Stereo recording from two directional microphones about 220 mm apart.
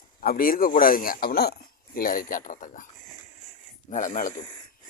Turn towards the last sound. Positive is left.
turn(degrees=35)  # may be behind; listen again after turning